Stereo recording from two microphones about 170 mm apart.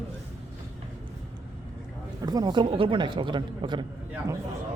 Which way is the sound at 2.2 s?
20° right (ahead or behind).